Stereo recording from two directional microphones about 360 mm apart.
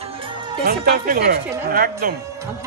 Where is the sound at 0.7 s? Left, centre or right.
Right.